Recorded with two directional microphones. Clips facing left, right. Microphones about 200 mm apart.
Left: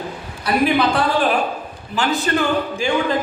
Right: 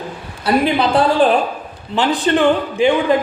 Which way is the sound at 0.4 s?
30° right (ahead or behind).